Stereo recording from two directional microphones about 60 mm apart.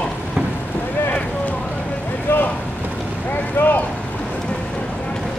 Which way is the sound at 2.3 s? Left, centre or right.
Left.